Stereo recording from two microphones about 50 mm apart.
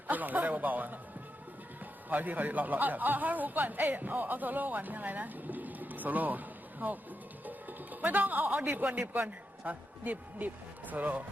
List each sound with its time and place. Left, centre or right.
0.1 s a man's voice: right